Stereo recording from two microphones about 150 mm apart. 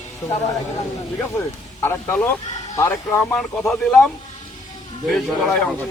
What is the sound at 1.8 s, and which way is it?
Speech, 15° left (ahead or behind).